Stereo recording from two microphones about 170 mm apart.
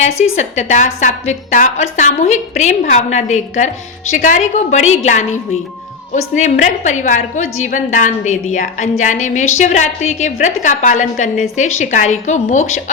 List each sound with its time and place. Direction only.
0.0 s a woman's voice: 45° left (ahead or behind)